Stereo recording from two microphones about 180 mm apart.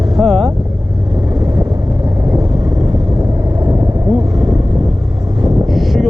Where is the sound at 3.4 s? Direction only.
20° right (ahead or behind).